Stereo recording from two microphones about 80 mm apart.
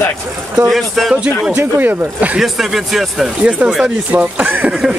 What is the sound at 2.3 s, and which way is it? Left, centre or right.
Speech, centre.